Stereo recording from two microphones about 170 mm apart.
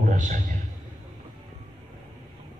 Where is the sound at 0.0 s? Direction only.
50° right (ahead or behind).